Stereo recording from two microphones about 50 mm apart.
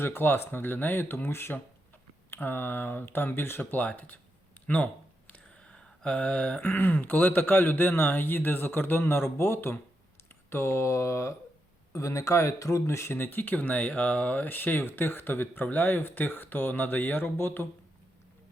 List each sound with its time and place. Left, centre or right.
0.0 s speech: left
5.6 s a sound: centre
6.1 s speech: left
13.1 s speech: left